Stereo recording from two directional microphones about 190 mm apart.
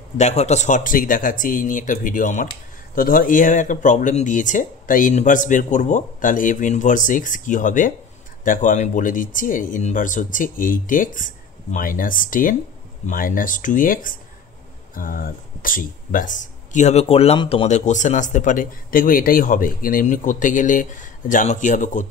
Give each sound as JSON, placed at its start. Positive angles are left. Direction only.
{"t": 0.2, "sound": "speech", "side_deg": 35}